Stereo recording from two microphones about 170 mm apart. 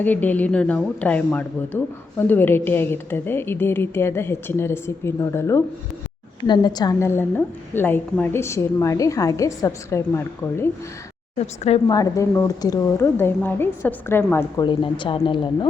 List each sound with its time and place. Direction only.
0.0 s speech: 10° left (ahead or behind)
11.3 s speech: 40° left (ahead or behind)
11.9 s speech: 20° left (ahead or behind)
14.6 s a woman's voice: 30° left (ahead or behind)